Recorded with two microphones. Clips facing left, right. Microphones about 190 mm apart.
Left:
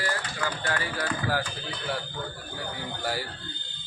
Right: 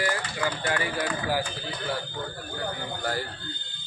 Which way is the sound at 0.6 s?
15° right (ahead or behind).